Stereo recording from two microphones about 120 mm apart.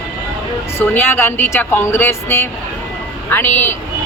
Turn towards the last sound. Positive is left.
turn(degrees=20)  # may be behind; listen again after turning